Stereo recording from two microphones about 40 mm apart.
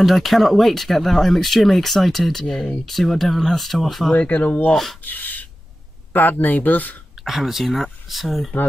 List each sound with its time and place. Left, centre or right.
0.0 s speech: centre
4.1 s speech: left
7.2 s speech: centre